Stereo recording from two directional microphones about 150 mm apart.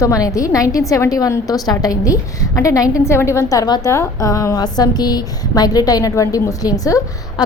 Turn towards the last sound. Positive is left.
turn(degrees=25)  # may be behind; listen again after turning